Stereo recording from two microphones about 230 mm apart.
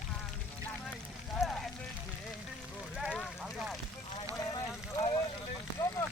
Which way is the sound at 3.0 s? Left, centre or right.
Centre.